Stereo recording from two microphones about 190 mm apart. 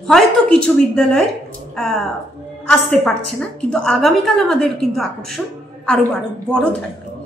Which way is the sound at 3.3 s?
5° left (ahead or behind).